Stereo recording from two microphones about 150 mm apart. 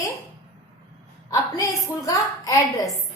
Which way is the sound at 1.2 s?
20° left (ahead or behind).